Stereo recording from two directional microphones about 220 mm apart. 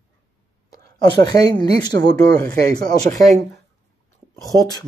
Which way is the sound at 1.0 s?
20° left (ahead or behind).